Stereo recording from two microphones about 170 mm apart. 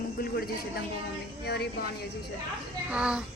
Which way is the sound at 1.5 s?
70° left (ahead or behind).